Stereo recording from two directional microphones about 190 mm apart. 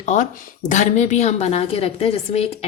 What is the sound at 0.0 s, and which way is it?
A woman's voice, 40° left (ahead or behind).